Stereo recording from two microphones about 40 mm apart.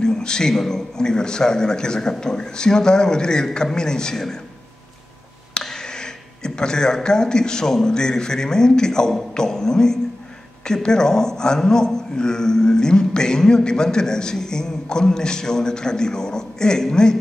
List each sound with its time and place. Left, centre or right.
0.0 s a man's voice: centre
5.5 s a man's voice: centre